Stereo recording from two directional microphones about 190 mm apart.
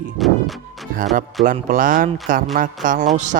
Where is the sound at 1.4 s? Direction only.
45° right (ahead or behind).